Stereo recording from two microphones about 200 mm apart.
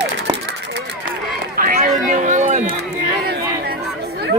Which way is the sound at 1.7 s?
45° right (ahead or behind).